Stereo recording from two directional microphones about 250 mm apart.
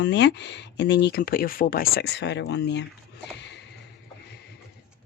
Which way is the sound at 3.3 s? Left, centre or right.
Left.